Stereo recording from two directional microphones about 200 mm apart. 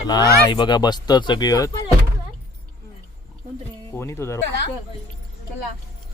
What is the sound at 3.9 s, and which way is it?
Speech, 10° left (ahead or behind).